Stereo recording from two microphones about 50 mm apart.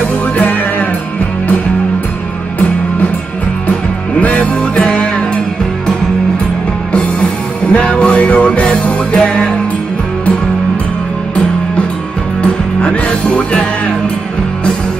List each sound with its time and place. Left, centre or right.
0.4 s music: left
4.2 s music: left
6.9 s music: left
12.8 s music: left